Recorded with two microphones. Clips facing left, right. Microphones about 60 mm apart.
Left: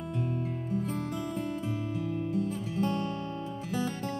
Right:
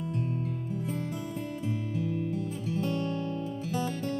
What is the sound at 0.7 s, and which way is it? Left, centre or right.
Music, left.